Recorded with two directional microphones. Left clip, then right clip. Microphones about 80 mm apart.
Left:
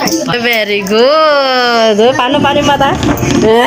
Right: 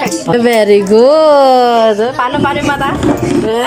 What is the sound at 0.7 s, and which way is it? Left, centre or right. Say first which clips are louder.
Speech: right 2 dB; right.